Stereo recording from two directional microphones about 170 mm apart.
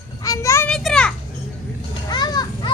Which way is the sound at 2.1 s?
25° left (ahead or behind).